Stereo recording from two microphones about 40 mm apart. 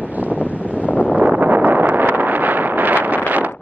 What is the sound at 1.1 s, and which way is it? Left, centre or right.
Wind noise, right.